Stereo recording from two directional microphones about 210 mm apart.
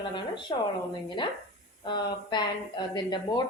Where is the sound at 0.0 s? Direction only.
25° left (ahead or behind).